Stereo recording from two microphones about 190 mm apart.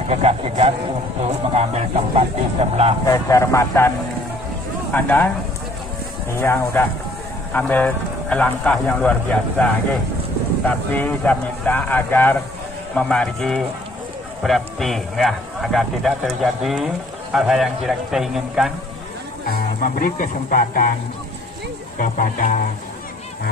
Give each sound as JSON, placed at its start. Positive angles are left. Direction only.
{"t": 0.1, "sound": "speech", "side_deg": -35}
{"t": 3.1, "sound": "speech", "side_deg": 15}
{"t": 4.9, "sound": "speech", "side_deg": 10}
{"t": 6.4, "sound": "a man's voice", "side_deg": 10}
{"t": 19.5, "sound": "speech", "side_deg": 45}
{"t": 21.9, "sound": "speech", "side_deg": 45}